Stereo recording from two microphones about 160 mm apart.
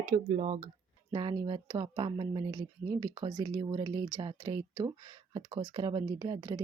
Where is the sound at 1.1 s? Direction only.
25° right (ahead or behind).